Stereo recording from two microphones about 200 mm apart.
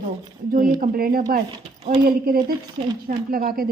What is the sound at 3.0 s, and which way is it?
Speech, 45° right (ahead or behind).